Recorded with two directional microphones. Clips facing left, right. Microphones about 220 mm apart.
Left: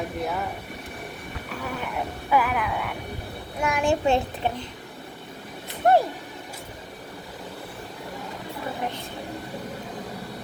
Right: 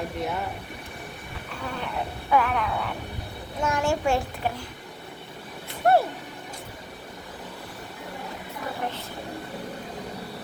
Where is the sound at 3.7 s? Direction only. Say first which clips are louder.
Left 2 dB; 15° left (ahead or behind).